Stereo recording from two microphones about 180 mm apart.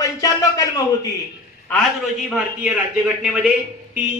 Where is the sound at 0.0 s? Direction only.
20° left (ahead or behind).